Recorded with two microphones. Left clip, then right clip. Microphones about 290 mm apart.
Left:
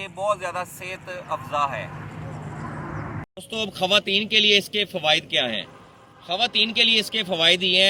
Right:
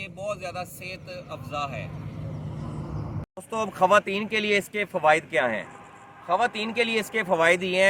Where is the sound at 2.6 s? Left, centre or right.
Centre.